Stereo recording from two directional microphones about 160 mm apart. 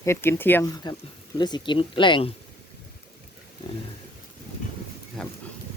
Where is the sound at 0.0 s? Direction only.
15° left (ahead or behind).